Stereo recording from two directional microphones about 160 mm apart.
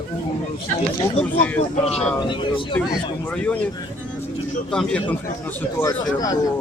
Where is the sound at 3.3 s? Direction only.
10° left (ahead or behind).